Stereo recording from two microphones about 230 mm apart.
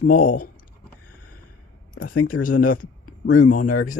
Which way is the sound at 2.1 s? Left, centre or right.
Left.